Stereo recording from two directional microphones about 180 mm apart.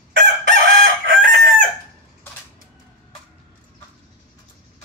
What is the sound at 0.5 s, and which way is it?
Chicken, 50° right (ahead or behind).